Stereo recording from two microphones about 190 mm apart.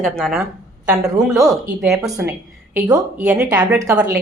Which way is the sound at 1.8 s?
Centre (ahead or behind).